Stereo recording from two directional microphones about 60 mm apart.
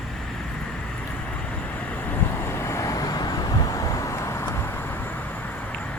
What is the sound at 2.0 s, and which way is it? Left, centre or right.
Vehicle, left.